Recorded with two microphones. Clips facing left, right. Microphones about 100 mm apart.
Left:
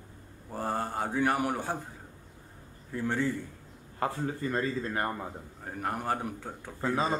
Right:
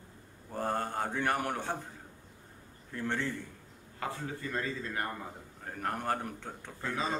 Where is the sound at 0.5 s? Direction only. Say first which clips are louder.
Left 1 dB; 5° left (ahead or behind).